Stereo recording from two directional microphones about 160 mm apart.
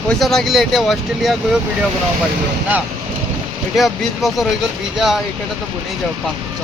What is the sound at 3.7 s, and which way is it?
Speech, centre (ahead or behind).